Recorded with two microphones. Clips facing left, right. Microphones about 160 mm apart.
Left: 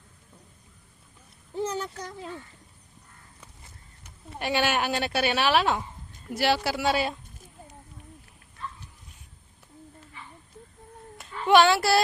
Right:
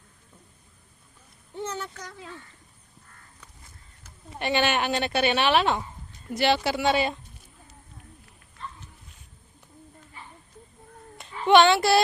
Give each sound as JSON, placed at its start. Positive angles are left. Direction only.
{"t": 1.6, "sound": "speech", "side_deg": 35}
{"t": 4.3, "sound": "a woman's voice", "side_deg": 5}
{"t": 11.4, "sound": "a woman's voice", "side_deg": 5}